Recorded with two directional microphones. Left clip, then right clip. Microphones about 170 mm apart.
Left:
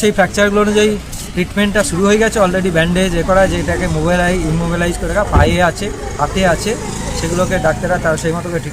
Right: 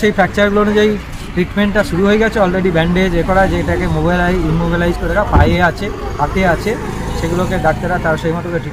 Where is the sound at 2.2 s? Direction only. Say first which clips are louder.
Even; 15° left (ahead or behind).